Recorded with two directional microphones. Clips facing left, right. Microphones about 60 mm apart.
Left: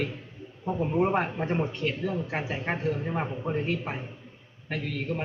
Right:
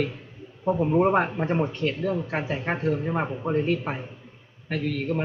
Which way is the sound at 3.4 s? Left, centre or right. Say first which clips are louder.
Right 6 dB; right.